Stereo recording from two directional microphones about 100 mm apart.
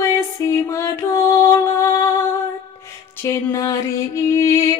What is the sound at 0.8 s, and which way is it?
Music, 30° left (ahead or behind).